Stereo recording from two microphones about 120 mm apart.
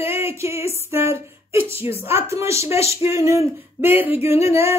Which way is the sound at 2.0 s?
20° right (ahead or behind).